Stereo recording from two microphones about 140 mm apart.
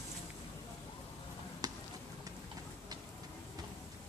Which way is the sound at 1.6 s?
30° right (ahead or behind).